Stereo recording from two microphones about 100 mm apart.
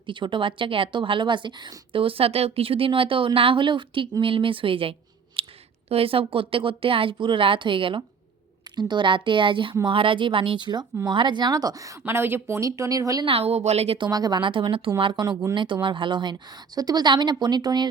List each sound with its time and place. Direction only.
0.0 s a woman's voice: 55° right (ahead or behind)
5.4 s clicking: 65° right (ahead or behind)
5.9 s a woman's voice: 70° right (ahead or behind)
8.7 s a woman's voice: 45° right (ahead or behind)
13.2 s a woman's voice: 80° right
14.0 s a woman's voice: 40° right (ahead or behind)